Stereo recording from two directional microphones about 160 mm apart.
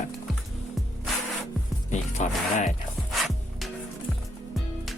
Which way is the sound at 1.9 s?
50° left (ahead or behind).